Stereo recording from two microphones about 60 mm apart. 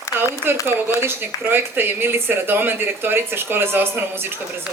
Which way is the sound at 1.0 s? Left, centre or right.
Right.